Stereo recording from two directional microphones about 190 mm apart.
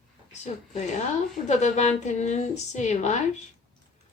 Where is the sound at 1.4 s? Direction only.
35° left (ahead or behind).